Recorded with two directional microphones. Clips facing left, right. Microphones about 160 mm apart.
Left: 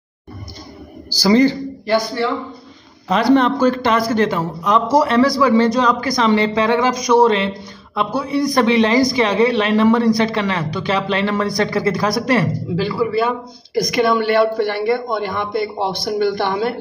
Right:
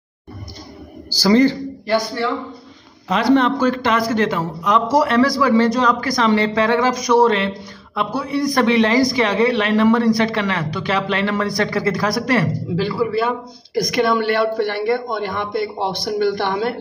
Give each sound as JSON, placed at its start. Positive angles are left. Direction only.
{"t": 1.1, "sound": "a man's voice", "side_deg": 15}
{"t": 3.1, "sound": "a man's voice", "side_deg": 40}
{"t": 12.7, "sound": "speech", "side_deg": 5}